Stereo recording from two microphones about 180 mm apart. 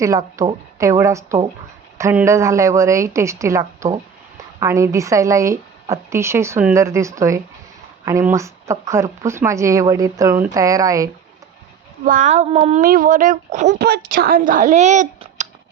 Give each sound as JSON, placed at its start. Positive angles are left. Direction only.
{"t": 0.0, "sound": "speech", "side_deg": -20}
{"t": 12.0, "sound": "speech", "side_deg": -45}
{"t": 12.8, "sound": "speech", "side_deg": -50}
{"t": 13.7, "sound": "speech", "side_deg": -60}